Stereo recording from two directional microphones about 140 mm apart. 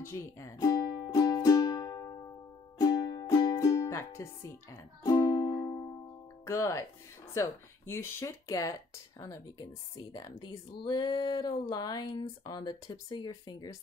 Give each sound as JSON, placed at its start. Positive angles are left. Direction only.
{"t": 0.0, "sound": "music", "side_deg": 20}
{"t": 6.4, "sound": "speech", "side_deg": 20}